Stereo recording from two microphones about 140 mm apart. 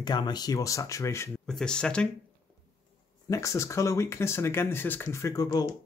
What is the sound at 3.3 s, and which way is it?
Speech, 20° left (ahead or behind).